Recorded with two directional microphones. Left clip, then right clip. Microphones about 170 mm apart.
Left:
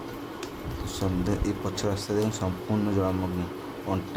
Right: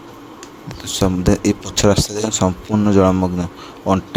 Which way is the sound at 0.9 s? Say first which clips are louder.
Right 13 dB; 50° right (ahead or behind).